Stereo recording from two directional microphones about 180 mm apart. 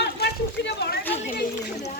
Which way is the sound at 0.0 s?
70° left (ahead or behind).